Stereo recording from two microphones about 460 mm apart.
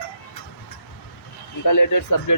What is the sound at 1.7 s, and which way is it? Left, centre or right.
Speech, left.